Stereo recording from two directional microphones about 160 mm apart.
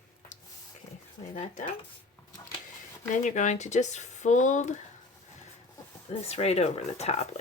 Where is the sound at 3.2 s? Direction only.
50° left (ahead or behind).